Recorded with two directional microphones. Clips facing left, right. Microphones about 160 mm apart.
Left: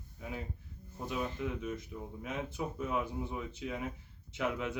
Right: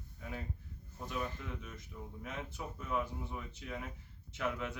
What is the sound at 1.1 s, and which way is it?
Speech, 15° left (ahead or behind).